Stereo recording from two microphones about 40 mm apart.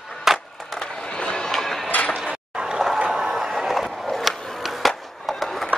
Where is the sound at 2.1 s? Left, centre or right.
Right.